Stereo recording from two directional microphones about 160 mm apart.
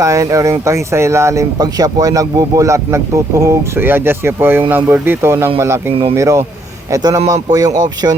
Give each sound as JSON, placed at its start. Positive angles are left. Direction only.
{"t": 0.0, "sound": "speech", "side_deg": -20}